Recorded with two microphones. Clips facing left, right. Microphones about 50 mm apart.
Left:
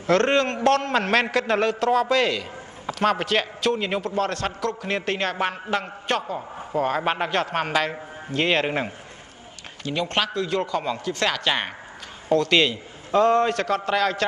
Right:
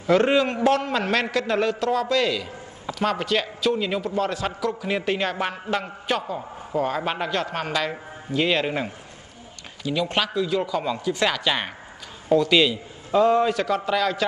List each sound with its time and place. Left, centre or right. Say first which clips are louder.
0.0 s a man's voice: right 1 dB; centre
0.9 s a man's voice: left 2 dB; centre
5.4 s a man's voice: left 1 dB; centre
5.8 s a man's voice: left 1 dB; centre
6.3 s a man's voice: even; centre
7.9 s a man's voice: right 1 dB; centre
10.1 s a man's voice: left 1 dB; centre
11.1 s a man's voice: right 3 dB; centre
11.4 s a man's voice: even; centre
12.3 s speech: right 1 dB; centre
12.5 s a man's voice: right 1 dB; centre
13.8 s a man's voice: left 2 dB; centre